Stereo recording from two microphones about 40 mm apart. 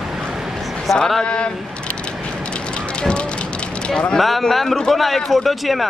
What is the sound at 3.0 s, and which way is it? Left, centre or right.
Fire, left.